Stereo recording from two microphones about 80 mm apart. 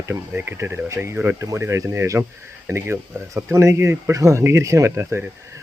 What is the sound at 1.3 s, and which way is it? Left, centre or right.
Speech, right.